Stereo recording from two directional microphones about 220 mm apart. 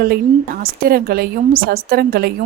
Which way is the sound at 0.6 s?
40° right (ahead or behind).